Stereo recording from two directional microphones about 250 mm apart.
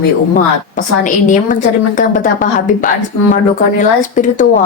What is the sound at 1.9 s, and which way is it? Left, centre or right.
Speech, left.